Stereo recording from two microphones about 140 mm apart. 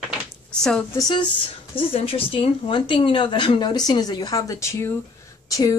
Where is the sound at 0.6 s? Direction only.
5° left (ahead or behind).